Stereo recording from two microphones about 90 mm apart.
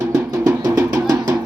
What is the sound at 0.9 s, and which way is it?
Music, 50° right (ahead or behind).